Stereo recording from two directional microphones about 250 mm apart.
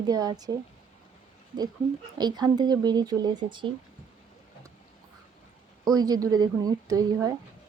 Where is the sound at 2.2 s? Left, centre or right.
Centre.